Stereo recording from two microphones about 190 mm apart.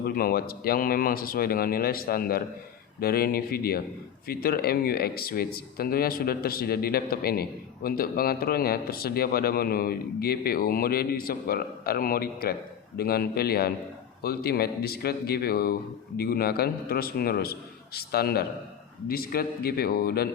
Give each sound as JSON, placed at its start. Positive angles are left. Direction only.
{"t": 0.0, "sound": "speech", "side_deg": 50}